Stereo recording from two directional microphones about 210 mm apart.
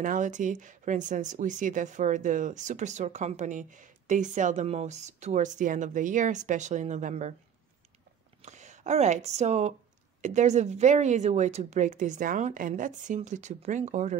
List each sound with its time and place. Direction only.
0.0 s speech: 40° right (ahead or behind)
8.4 s speech: 35° right (ahead or behind)